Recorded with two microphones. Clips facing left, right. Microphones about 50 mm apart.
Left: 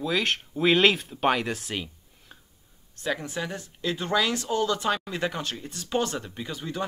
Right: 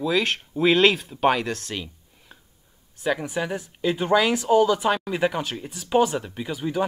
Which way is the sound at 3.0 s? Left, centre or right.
Centre.